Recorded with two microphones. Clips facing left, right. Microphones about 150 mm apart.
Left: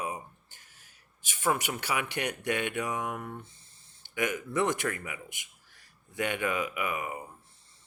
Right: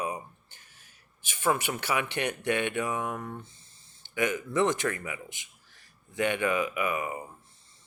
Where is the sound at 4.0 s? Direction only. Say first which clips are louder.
Right 2 dB; 20° right (ahead or behind).